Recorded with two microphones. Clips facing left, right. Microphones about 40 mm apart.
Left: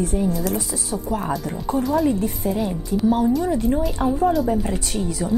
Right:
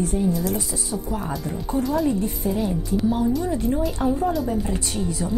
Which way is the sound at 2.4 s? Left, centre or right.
Left.